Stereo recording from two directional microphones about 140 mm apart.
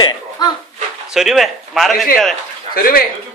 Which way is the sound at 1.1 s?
5° right (ahead or behind).